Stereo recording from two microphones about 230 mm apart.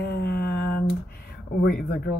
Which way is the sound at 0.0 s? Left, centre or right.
Left.